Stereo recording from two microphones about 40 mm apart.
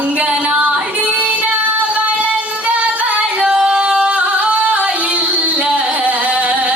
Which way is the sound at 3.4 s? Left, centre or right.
Centre.